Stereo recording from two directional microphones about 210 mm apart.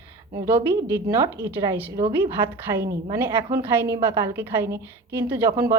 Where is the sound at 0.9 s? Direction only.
15° right (ahead or behind).